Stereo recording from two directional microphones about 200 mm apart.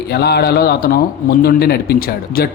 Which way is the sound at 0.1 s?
55° left (ahead or behind).